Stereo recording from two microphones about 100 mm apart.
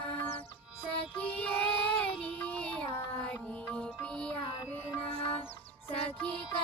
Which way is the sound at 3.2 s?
10° left (ahead or behind).